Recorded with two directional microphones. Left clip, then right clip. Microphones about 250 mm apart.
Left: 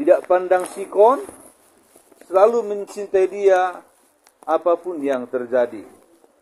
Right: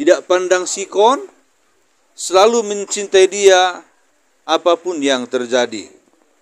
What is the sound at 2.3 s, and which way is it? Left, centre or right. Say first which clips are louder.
A man's voice: right 3 dB; right.